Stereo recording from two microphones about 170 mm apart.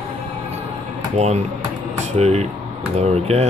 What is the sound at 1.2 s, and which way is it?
Speech, 40° right (ahead or behind).